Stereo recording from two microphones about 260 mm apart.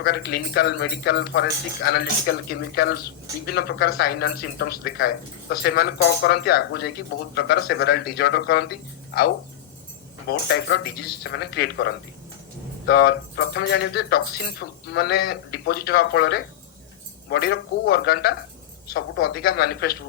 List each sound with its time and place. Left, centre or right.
0.0 s speech: left
10.2 s speech: left